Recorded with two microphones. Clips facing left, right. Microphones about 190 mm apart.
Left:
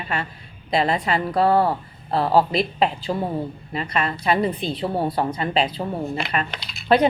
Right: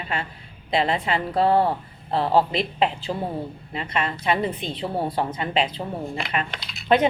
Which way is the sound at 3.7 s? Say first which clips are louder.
Left 2 dB; 20° right (ahead or behind).